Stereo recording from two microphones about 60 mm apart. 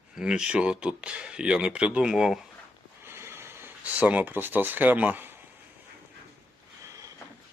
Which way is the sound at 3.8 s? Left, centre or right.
Right.